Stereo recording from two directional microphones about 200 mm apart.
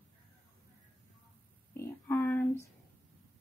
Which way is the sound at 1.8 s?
10° left (ahead or behind).